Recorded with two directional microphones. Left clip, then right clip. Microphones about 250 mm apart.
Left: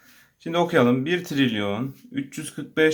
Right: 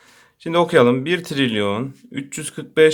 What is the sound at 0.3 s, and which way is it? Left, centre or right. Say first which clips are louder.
Speech: right 6 dB; right.